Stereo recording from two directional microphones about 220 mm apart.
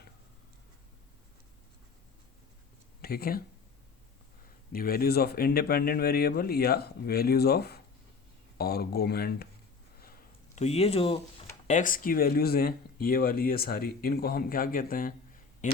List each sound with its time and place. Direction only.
3.0 s speech: 45° left (ahead or behind)
4.7 s speech: 40° left (ahead or behind)
10.0 s a sound: 35° left (ahead or behind)
11.7 s speech: 35° left (ahead or behind)